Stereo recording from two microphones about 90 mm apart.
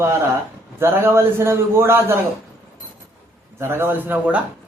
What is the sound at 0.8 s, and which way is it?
A man's voice, 25° right (ahead or behind).